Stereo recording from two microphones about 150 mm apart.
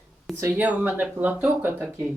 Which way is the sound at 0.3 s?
15° right (ahead or behind).